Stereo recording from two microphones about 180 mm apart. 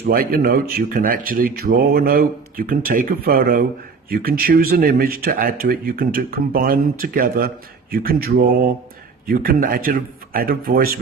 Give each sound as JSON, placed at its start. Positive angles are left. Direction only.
{"t": 0.0, "sound": "speech", "side_deg": -55}